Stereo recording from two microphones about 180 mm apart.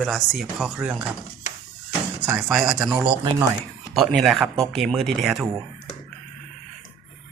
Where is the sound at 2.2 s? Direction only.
5° right (ahead or behind).